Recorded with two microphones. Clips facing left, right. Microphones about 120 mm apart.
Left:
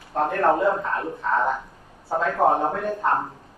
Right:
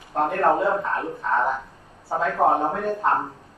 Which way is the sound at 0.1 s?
Centre (ahead or behind).